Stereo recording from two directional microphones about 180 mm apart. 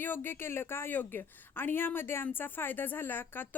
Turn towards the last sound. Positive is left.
turn(degrees=10)  # may be behind; listen again after turning